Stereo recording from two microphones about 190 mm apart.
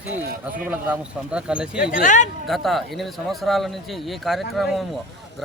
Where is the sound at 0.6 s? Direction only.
5° right (ahead or behind).